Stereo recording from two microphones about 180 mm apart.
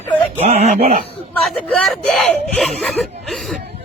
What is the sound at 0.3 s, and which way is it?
Speech, 35° right (ahead or behind).